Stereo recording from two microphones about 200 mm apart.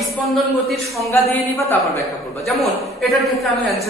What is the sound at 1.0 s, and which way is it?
Speech, 15° left (ahead or behind).